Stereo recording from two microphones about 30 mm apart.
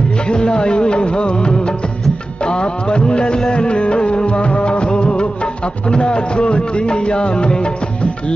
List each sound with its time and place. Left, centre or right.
0.3 s music: left